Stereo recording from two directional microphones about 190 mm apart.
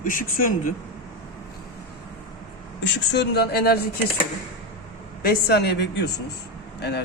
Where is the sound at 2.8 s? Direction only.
65° left (ahead or behind).